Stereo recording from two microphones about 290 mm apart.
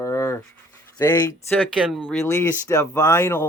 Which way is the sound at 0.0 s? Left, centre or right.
Centre.